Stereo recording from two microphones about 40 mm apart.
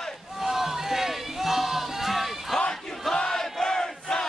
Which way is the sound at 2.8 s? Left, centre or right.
Centre.